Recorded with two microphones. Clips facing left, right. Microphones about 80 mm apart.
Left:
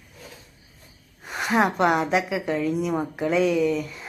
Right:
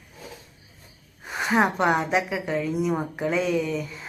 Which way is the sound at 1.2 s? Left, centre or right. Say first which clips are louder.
Even; centre.